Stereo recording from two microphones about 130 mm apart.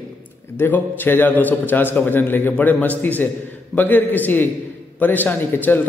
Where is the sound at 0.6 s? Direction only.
15° left (ahead or behind).